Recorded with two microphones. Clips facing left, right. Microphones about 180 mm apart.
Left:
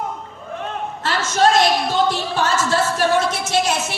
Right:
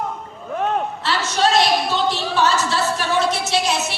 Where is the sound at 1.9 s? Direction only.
50° left (ahead or behind).